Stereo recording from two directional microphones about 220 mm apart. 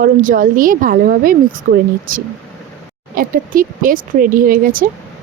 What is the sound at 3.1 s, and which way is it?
A woman's voice, 40° right (ahead or behind).